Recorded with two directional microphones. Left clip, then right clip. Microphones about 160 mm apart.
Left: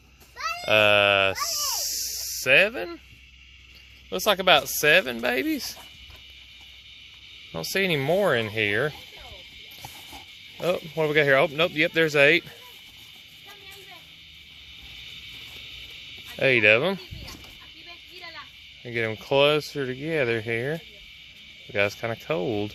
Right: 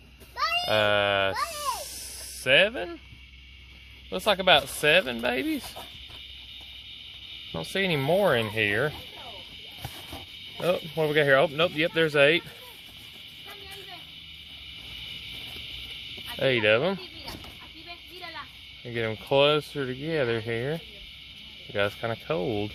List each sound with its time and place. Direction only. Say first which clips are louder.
0.6 s speech: left 7 dB; 40° left (ahead or behind)
1.5 s a sound: left 3 dB; 10° left (ahead or behind)
2.4 s speech: left 2 dB; 35° left (ahead or behind)
4.1 s speech: left 1 dB; 35° left (ahead or behind)
7.7 s speech: left 2 dB; 35° left (ahead or behind)
10.6 s speech: left 1 dB; 30° left (ahead or behind)
16.4 s speech: left 4 dB; 30° left (ahead or behind)
18.9 s speech: left 2 dB; 30° left (ahead or behind)